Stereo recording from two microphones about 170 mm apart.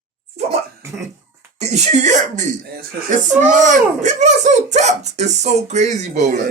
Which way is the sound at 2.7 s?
50° right (ahead or behind).